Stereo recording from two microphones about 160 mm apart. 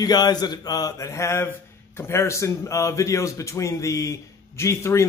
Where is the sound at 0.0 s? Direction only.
25° left (ahead or behind).